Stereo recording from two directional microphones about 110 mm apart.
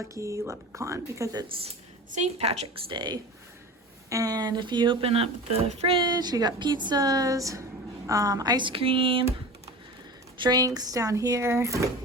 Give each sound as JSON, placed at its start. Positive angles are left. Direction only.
{"t": 0.1, "sound": "speech", "side_deg": -25}
{"t": 2.1, "sound": "a woman's voice", "side_deg": -80}
{"t": 2.9, "sound": "speech", "side_deg": -45}
{"t": 6.0, "sound": "a woman's voice", "side_deg": -40}
{"t": 10.3, "sound": "a woman's voice", "side_deg": -40}